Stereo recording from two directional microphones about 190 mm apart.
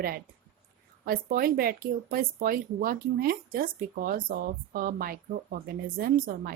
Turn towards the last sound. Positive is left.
turn(degrees=-45)  # may be behind; listen again after turning